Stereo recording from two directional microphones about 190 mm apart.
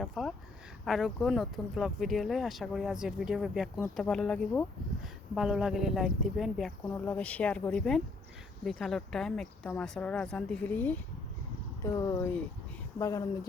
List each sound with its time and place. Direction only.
0.0 s speech: centre (ahead or behind); by 13.5 s 15° left (ahead or behind)